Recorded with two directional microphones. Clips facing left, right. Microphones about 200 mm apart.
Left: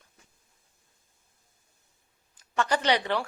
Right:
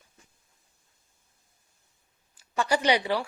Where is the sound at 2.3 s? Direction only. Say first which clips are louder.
Right 1 dB; 10° right (ahead or behind).